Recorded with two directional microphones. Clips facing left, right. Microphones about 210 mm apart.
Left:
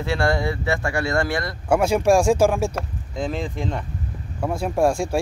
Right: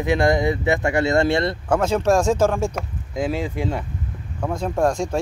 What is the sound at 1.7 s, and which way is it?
Speech, 10° left (ahead or behind).